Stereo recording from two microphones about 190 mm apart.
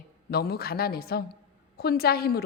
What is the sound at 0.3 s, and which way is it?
A woman's voice, 55° left (ahead or behind).